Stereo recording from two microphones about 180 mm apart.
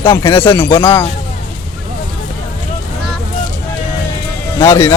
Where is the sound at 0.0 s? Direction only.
25° left (ahead or behind).